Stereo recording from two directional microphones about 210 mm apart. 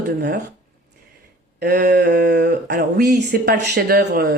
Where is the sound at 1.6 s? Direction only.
50° right (ahead or behind).